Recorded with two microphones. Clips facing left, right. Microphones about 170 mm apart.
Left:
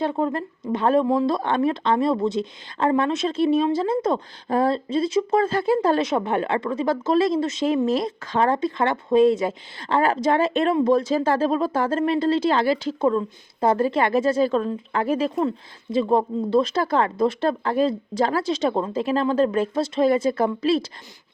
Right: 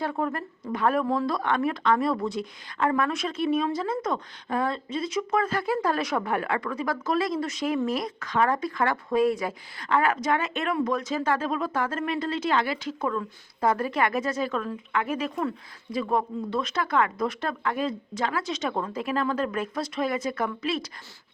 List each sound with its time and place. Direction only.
0.0 s a woman's voice: 25° left (ahead or behind)